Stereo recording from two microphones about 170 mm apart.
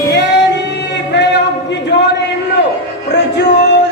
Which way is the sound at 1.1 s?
90° left.